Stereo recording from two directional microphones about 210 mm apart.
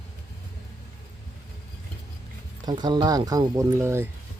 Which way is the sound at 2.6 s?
20° right (ahead or behind).